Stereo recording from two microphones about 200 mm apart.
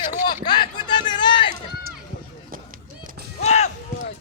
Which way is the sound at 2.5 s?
45° right (ahead or behind).